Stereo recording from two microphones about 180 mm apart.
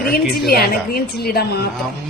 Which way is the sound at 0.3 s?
60° left (ahead or behind).